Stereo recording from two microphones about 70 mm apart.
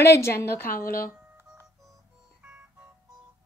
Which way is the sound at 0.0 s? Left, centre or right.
Left.